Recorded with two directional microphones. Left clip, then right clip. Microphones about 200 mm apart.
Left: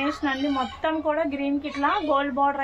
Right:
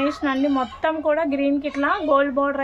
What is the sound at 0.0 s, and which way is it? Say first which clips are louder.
Speech: right 4 dB; 50° right (ahead or behind).